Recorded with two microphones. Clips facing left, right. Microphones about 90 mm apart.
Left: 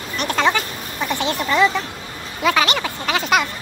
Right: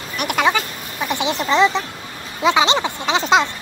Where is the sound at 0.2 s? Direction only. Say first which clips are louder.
Right 1 dB; 10° right (ahead or behind).